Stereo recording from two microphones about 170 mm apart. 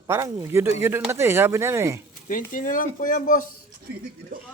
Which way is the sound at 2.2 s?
50° left (ahead or behind).